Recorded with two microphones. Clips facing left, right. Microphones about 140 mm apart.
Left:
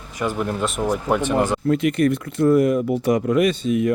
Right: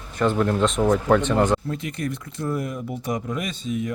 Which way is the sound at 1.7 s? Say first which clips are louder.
Left 11 dB; 70° left (ahead or behind).